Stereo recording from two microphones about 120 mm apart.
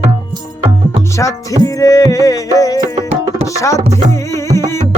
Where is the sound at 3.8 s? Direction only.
70° right (ahead or behind).